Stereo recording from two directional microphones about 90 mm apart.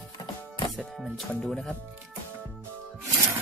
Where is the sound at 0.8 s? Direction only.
Centre (ahead or behind).